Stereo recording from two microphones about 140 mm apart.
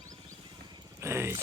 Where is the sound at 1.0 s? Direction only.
20° right (ahead or behind).